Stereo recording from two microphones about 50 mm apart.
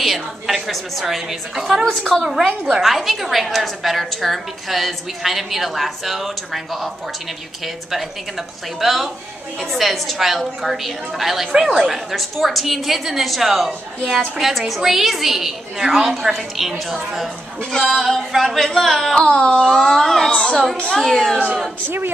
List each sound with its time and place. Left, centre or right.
0.0 s a woman's voice: centre
1.9 s speech: centre
2.7 s a woman's voice: centre
17.6 s speech: centre
17.8 s a woman's voice: centre
19.1 s speech: centre
19.7 s speech: centre